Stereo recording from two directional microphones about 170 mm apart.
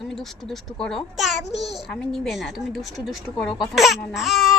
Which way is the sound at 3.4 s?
30° left (ahead or behind).